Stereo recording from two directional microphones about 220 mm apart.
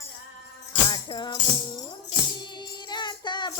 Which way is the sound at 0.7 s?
20° left (ahead or behind).